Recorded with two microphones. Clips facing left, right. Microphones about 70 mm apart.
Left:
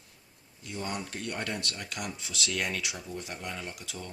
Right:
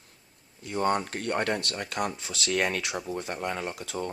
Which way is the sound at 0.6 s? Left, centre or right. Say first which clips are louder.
Right 10 dB; right.